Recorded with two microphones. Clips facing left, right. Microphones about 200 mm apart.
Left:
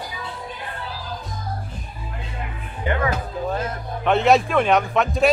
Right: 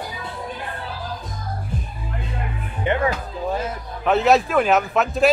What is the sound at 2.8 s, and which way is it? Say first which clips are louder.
Music: right 2 dB; 20° right (ahead or behind).